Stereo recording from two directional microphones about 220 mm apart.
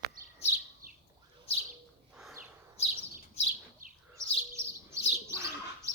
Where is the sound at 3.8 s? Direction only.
40° right (ahead or behind).